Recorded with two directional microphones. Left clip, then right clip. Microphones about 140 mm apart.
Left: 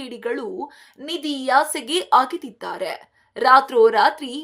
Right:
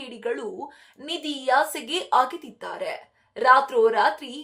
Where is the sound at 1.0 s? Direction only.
25° left (ahead or behind).